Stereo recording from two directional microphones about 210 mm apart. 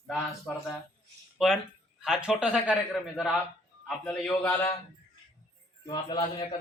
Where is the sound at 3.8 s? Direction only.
5° left (ahead or behind).